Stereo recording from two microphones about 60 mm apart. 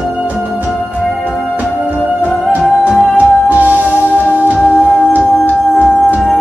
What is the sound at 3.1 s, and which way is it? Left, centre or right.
Music, right.